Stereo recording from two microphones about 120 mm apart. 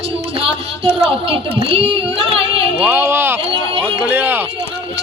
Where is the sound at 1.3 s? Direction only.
50° right (ahead or behind).